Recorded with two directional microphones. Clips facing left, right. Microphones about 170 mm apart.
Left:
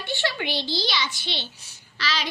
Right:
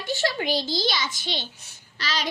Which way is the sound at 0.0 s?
40° right (ahead or behind).